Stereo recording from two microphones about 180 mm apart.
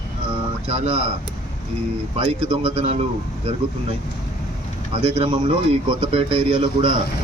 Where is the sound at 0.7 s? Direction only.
35° right (ahead or behind).